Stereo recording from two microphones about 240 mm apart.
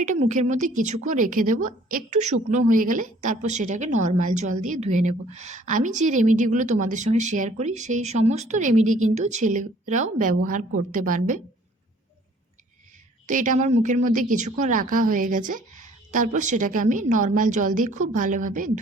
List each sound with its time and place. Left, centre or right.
0.0 s a woman's voice: right
13.2 s a woman's voice: right